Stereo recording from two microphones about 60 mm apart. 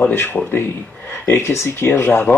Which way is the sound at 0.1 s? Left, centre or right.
Left.